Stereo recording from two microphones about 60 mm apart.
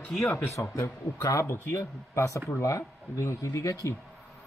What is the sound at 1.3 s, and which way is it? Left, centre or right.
Speech, left.